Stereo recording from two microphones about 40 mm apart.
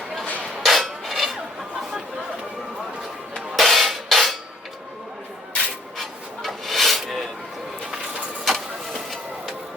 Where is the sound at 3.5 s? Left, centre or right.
Centre.